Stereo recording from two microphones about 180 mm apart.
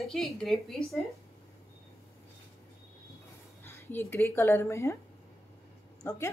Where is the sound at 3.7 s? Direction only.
10° left (ahead or behind).